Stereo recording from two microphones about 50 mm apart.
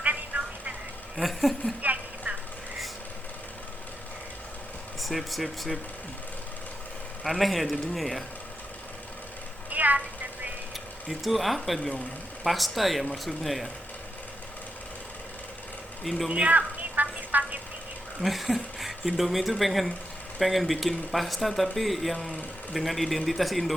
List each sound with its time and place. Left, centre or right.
0.0 s telephone: right
1.1 s speech: centre
1.8 s clip-clop: right
4.9 s speech: centre
7.3 s speech: centre
9.6 s a sound: right
11.2 s speech: centre
16.0 s speech: centre
16.5 s a sound: right
18.2 s speech: centre